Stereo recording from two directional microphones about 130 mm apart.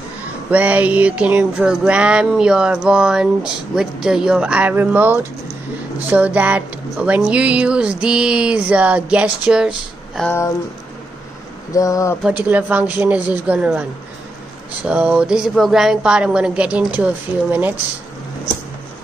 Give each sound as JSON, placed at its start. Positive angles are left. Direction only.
{"t": 0.5, "sound": "music", "side_deg": -10}
{"t": 11.7, "sound": "speech", "side_deg": 25}
{"t": 12.2, "sound": "music", "side_deg": -10}